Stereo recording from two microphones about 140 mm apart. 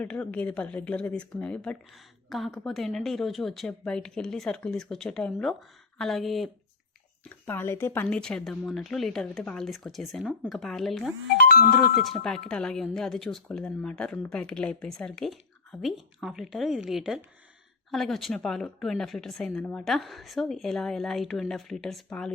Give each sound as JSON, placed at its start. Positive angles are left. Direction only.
{"t": 0.0, "sound": "speech", "side_deg": 10}
{"t": 7.3, "sound": "speech", "side_deg": 15}
{"t": 11.4, "sound": "speech", "side_deg": 90}
{"t": 12.0, "sound": "speech", "side_deg": 5}